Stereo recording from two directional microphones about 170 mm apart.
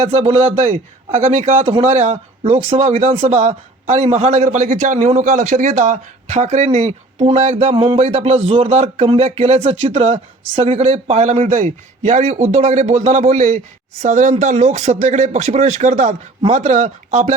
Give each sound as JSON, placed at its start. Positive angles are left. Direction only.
{"t": 0.0, "sound": "a man's voice", "side_deg": -35}